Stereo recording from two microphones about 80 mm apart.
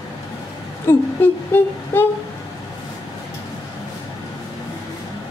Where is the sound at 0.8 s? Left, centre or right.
Left.